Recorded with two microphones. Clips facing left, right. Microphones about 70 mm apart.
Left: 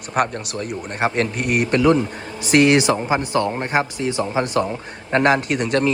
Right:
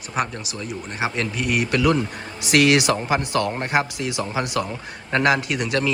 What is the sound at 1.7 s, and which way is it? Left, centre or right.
A man's voice, left.